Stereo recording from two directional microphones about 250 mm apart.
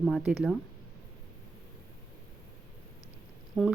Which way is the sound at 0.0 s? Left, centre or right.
Centre.